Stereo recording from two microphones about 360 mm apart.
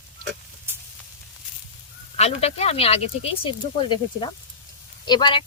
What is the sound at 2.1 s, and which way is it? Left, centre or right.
Speech, centre.